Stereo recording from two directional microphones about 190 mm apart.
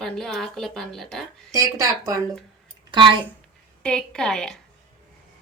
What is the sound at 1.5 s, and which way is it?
Speech, 15° right (ahead or behind).